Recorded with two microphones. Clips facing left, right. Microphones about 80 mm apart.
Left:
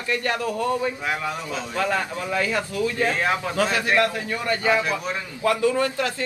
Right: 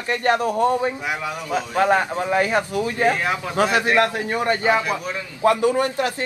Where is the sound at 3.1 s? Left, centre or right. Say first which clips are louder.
Right 2 dB; centre.